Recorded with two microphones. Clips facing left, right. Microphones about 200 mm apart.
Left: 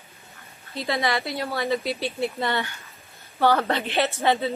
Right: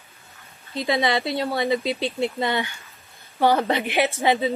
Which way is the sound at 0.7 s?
15° right (ahead or behind).